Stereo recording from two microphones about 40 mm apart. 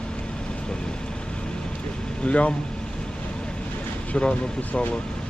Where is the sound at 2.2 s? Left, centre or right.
Left.